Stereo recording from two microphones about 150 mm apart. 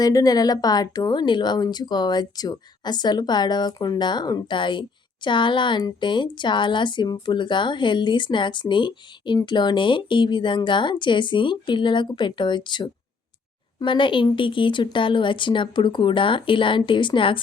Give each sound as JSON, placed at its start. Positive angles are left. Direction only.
{"t": 0.0, "sound": "speech", "side_deg": 25}